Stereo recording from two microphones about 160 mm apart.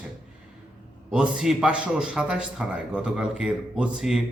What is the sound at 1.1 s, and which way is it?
A man's voice, 5° right (ahead or behind).